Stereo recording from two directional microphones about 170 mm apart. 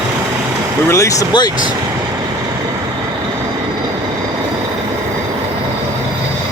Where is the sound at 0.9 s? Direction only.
20° left (ahead or behind).